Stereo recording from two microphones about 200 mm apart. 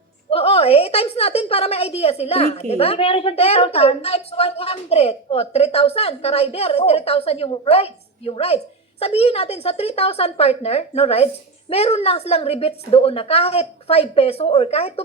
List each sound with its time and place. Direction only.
0.3 s a woman's voice: 30° left (ahead or behind)